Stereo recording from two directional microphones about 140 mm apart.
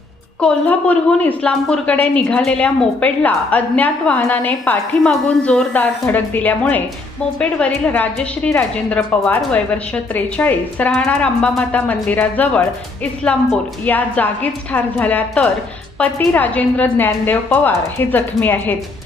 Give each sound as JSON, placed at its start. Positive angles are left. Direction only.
{"t": 0.4, "sound": "a woman's voice", "side_deg": 10}